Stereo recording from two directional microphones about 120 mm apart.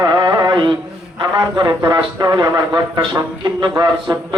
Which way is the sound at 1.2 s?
35° right (ahead or behind).